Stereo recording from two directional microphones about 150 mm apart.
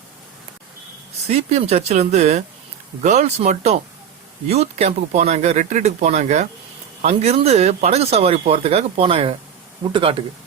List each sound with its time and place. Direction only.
1.3 s speech: 45° right (ahead or behind)